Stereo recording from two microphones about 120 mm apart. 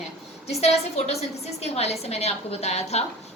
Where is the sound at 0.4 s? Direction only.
60° left (ahead or behind).